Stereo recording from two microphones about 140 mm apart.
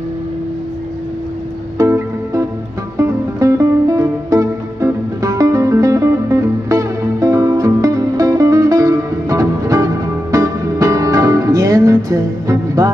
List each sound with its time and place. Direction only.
1.8 s music: 20° right (ahead or behind)